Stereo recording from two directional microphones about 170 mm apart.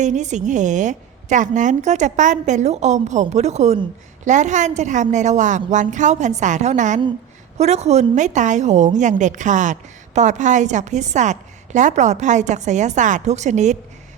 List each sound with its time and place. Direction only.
0.0 s a woman's voice: 45° right (ahead or behind)